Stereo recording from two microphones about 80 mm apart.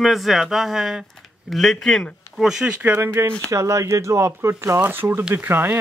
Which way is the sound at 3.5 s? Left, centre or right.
Right.